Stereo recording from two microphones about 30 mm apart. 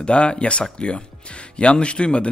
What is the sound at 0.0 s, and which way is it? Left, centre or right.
Speech, left.